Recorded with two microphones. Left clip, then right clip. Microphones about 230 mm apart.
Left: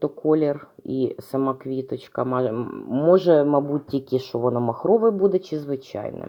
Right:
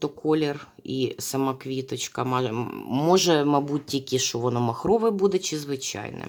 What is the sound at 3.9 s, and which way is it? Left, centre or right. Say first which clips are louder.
Speech: left 1 dB; centre.